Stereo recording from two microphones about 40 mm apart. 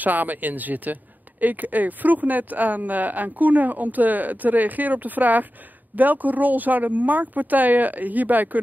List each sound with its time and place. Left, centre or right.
0.0 s speech: right